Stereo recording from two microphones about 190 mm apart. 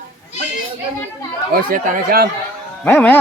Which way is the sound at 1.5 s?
50° right (ahead or behind).